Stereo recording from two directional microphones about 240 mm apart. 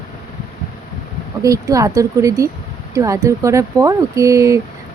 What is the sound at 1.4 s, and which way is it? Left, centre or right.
Speech, centre.